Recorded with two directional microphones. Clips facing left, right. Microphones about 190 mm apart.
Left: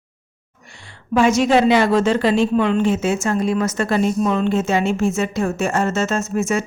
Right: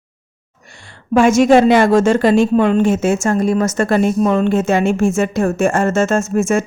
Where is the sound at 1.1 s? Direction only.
50° right (ahead or behind).